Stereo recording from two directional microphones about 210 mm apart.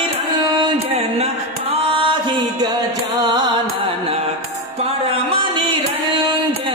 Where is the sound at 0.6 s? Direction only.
30° right (ahead or behind).